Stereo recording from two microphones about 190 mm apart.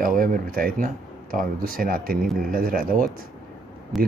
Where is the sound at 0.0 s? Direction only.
50° right (ahead or behind).